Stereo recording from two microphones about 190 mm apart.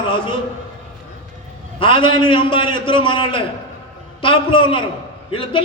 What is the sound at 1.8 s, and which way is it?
A man's voice, 25° left (ahead or behind).